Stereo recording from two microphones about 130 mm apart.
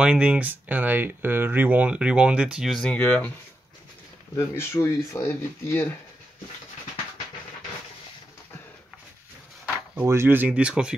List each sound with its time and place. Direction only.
0.0 s speech: 10° right (ahead or behind); by 3.3 s 10° left (ahead or behind)
4.4 s speech: 20° left (ahead or behind)
9.9 s speech: 20° right (ahead or behind)